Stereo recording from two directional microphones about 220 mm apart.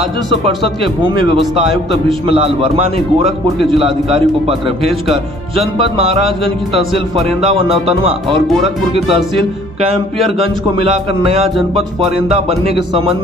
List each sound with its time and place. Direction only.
1.1 s a man's voice: 25° right (ahead or behind)
1.7 s a man's voice: centre (ahead or behind)
2.2 s a man's voice: 25° right (ahead or behind)
5.0 s a man's voice: centre (ahead or behind)
5.8 s a man's voice: 25° right (ahead or behind)
6.4 s a man's voice: centre (ahead or behind)
7.4 s a man's voice: 25° right (ahead or behind)
10.4 s a man's voice: 25° right (ahead or behind)